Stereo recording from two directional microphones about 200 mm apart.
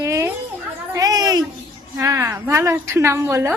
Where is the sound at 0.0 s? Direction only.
15° right (ahead or behind).